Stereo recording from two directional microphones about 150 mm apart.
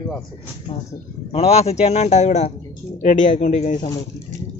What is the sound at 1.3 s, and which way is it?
A man's voice, 45° left (ahead or behind).